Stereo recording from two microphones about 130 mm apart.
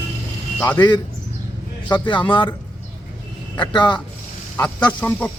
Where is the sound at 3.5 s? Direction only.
35° left (ahead or behind).